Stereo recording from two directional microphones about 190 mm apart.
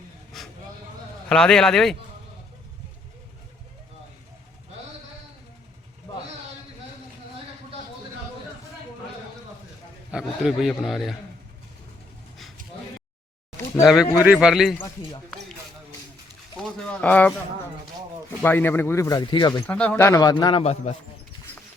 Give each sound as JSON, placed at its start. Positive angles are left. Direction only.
{"t": 0.3, "sound": "vehicle", "side_deg": 0}
{"t": 1.3, "sound": "a man's voice", "side_deg": 5}
{"t": 10.1, "sound": "a man's voice", "side_deg": -5}
{"t": 14.0, "sound": "speech", "side_deg": 15}
{"t": 14.3, "sound": "a man's voice", "side_deg": 0}
{"t": 16.6, "sound": "a man's voice", "side_deg": 5}
{"t": 18.4, "sound": "speech", "side_deg": 10}
{"t": 19.6, "sound": "a man's voice", "side_deg": 5}